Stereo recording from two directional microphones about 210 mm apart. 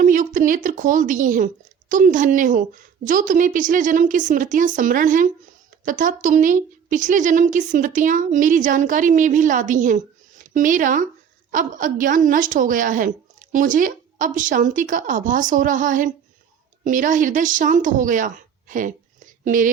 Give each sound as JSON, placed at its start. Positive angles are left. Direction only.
{"t": 0.0, "sound": "a woman's voice", "side_deg": -40}